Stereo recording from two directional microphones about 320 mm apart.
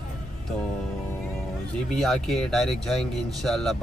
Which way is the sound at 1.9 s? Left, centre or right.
Centre.